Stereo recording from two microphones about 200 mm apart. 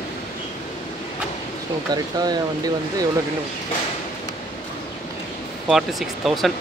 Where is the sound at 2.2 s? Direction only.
20° right (ahead or behind).